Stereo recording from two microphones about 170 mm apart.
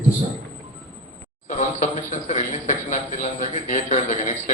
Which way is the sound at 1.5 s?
45° left (ahead or behind).